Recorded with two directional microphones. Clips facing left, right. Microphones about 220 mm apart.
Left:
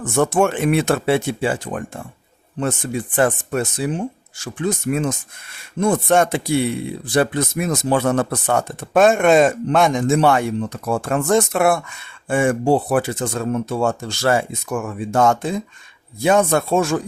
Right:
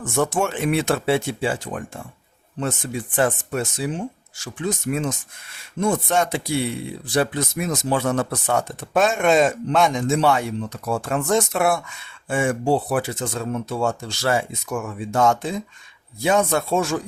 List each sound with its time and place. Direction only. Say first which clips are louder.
0.0 s speech: left 5 dB; 55° left (ahead or behind)